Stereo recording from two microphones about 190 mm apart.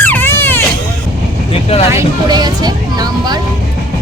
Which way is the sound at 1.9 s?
20° right (ahead or behind).